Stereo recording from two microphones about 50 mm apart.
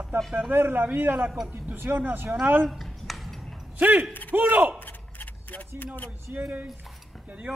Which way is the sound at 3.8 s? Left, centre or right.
Right.